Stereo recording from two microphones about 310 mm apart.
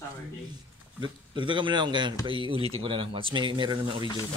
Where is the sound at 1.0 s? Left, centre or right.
Centre.